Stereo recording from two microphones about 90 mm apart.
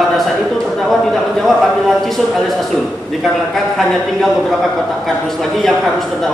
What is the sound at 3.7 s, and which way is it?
A man's voice, 5° left (ahead or behind).